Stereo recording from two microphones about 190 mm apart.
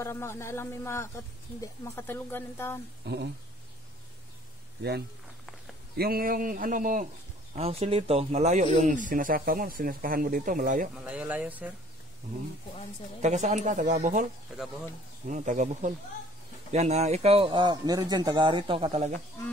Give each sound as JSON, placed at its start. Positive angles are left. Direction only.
{"t": 0.0, "sound": "speech", "side_deg": 15}
{"t": 3.1, "sound": "speech", "side_deg": -60}
{"t": 5.9, "sound": "speech", "side_deg": -50}
{"t": 7.5, "sound": "speech", "side_deg": -35}
{"t": 11.0, "sound": "speech", "side_deg": -5}
{"t": 13.2, "sound": "speech", "side_deg": -40}
{"t": 15.2, "sound": "speech", "side_deg": -40}